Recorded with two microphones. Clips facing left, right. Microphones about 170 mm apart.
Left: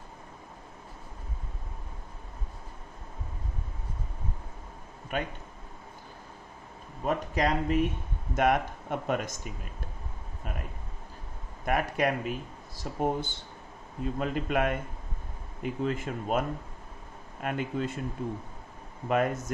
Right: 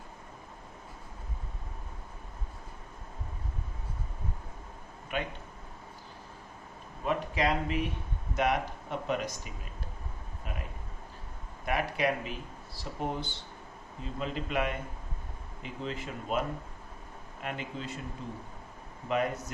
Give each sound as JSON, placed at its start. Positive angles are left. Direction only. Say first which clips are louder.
{"t": 5.1, "sound": "speech", "louder": "left 2 dB", "side_deg": 45}
{"t": 7.0, "sound": "speech", "louder": "left 2 dB", "side_deg": 45}
{"t": 11.6, "sound": "speech", "louder": "left 2 dB", "side_deg": 45}
{"t": 17.4, "sound": "speech", "louder": "left 7 dB", "side_deg": 50}